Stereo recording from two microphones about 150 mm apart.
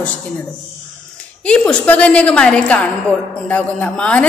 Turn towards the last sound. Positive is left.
turn(degrees=5)  # may be behind; listen again after turning